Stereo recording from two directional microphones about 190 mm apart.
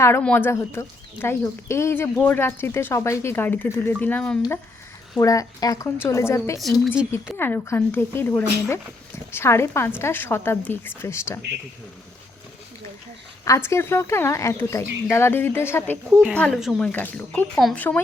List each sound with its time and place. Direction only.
0.0 s speech: 10° left (ahead or behind)
5.2 s speech: 20° left (ahead or behind)
6.8 s speech: 5° right (ahead or behind)
7.3 s speech: 10° left (ahead or behind)
13.4 s speech: 15° left (ahead or behind)